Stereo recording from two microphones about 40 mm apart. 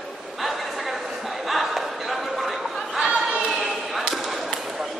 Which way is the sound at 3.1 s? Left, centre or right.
Right.